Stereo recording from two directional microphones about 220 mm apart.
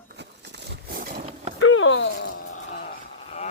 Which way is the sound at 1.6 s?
65° left (ahead or behind).